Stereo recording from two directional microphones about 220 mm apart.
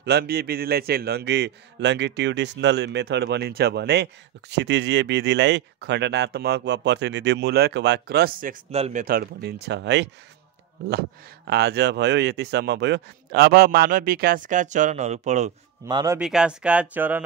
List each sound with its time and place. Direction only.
0.0 s a man's voice: 45° right (ahead or behind); by 9.0 s 30° right (ahead or behind)
9.0 s a man's voice: 45° right (ahead or behind)
15.8 s a man's voice: 15° right (ahead or behind)
16.2 s speech: 5° right (ahead or behind)